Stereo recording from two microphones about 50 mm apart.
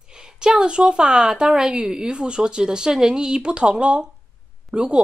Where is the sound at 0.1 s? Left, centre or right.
Centre.